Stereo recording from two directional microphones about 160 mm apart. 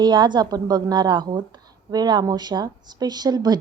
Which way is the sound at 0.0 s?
30° right (ahead or behind).